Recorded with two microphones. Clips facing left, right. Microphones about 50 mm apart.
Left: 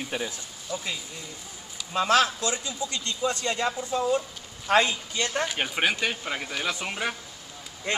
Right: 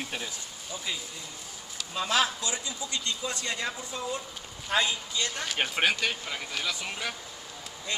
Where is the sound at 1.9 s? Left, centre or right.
Left.